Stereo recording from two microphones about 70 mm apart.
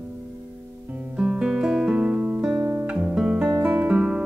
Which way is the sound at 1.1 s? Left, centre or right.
Centre.